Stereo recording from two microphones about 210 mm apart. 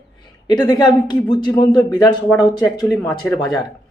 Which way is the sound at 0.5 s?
20° left (ahead or behind).